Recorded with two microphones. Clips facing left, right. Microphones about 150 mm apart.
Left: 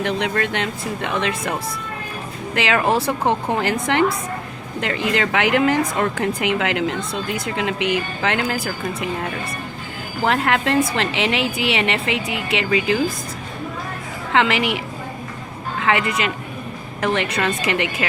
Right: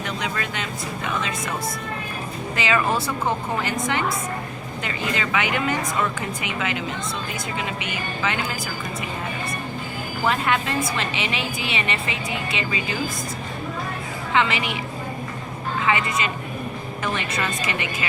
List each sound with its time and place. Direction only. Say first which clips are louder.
0.0 s speech: left 7 dB; 75° left (ahead or behind)
2.6 s a woman's voice: left 4 dB; 80° left
10.2 s a woman's voice: left 4 dB; 80° left
14.3 s a woman's voice: left 4 dB; 90° left
15.9 s a woman's voice: left 4 dB; 75° left (ahead or behind)